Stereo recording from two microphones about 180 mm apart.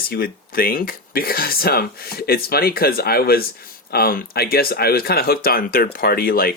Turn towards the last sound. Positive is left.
turn(degrees=55)  # may be behind; listen again after turning